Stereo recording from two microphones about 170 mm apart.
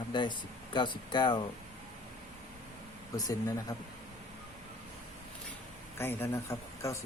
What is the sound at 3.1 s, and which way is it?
Speech, 20° left (ahead or behind).